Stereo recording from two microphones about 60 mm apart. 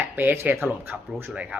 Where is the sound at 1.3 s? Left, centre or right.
Right.